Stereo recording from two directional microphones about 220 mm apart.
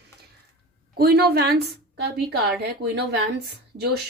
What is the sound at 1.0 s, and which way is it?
Speech, 45° right (ahead or behind).